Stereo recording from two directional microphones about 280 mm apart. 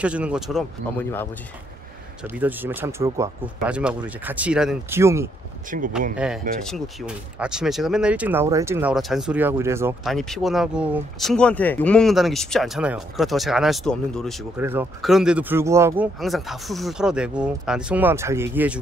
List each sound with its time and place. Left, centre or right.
0.0 s speech: centre
2.2 s speech: centre
5.7 s speech: right
6.1 s speech: centre